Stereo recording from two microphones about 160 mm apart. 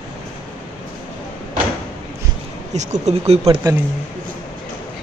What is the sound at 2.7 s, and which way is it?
Speech, 45° right (ahead or behind).